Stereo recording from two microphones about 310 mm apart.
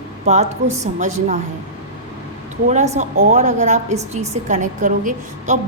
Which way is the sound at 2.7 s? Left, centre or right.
Right.